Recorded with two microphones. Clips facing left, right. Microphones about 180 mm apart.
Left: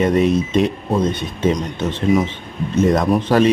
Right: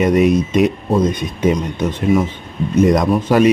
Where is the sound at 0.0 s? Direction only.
10° right (ahead or behind).